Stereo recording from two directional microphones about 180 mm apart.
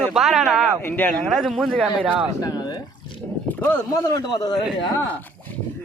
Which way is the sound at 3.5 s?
10° left (ahead or behind).